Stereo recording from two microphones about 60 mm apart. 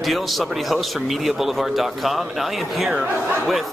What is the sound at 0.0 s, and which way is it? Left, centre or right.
A man's voice, centre.